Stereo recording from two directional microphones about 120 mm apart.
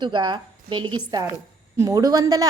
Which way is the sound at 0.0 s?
40° right (ahead or behind).